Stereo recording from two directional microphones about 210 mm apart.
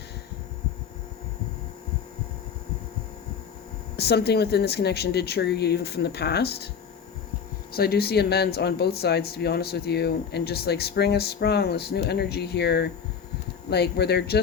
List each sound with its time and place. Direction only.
3.9 s speech: 50° left (ahead or behind)
7.7 s speech: 50° left (ahead or behind)